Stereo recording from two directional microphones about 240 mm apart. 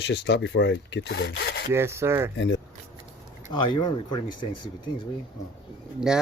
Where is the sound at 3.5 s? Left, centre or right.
Centre.